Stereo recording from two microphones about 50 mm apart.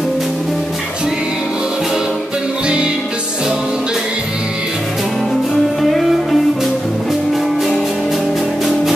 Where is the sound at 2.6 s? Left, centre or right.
Centre.